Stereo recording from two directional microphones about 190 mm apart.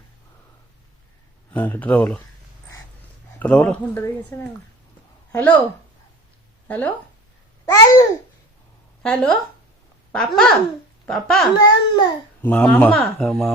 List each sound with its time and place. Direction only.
1.5 s speech: 10° left (ahead or behind)
3.3 s speech: 5° left (ahead or behind)
6.7 s speech: 10° left (ahead or behind)
7.6 s babbling: 20° left (ahead or behind)
9.0 s speech: 5° left (ahead or behind)
11.5 s a child's voice: 20° left (ahead or behind)
12.4 s speech: 10° left (ahead or behind)